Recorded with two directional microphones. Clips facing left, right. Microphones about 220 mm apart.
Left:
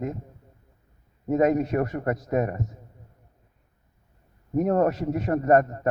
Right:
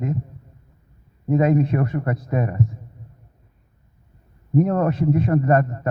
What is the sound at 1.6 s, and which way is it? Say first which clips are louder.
Speech: right 2 dB; 45° left (ahead or behind).